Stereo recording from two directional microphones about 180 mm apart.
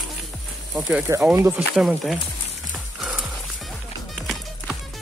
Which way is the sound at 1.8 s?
Centre (ahead or behind).